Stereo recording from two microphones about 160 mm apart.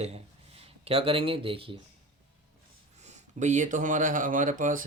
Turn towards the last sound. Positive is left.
turn(degrees=-55)  # may be behind; listen again after turning